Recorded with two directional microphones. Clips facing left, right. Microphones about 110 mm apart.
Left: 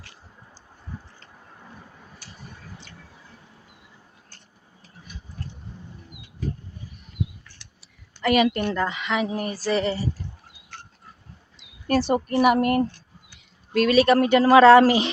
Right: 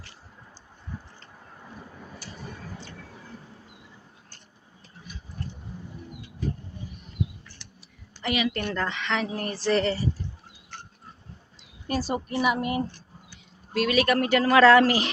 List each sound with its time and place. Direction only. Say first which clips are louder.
8.2 s a woman's voice: left 7 dB; 50° left (ahead or behind)
8.7 s speech: left 3 dB; 10° left (ahead or behind)
11.9 s a woman's voice: left 7 dB; 60° left (ahead or behind)
13.9 s speech: left 5 dB; 30° left (ahead or behind)